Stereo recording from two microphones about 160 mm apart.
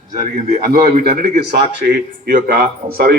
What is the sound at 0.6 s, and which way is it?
A man's voice, 70° right (ahead or behind).